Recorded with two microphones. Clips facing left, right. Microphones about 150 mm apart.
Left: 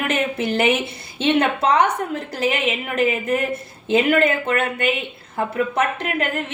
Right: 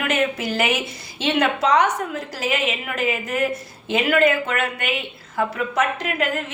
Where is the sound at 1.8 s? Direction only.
55° left (ahead or behind).